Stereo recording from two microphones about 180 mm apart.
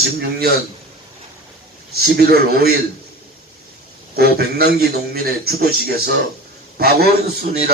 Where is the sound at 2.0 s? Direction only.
60° right (ahead or behind).